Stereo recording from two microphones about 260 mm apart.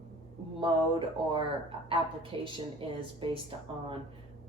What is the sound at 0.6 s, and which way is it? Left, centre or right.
Speech, centre.